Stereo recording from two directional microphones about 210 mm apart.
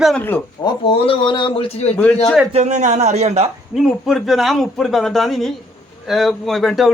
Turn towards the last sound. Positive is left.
turn(degrees=0)  # may be behind; listen again after turning